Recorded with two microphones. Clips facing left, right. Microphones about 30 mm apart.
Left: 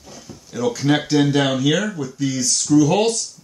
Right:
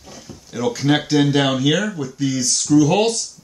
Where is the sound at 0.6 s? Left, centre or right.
Right.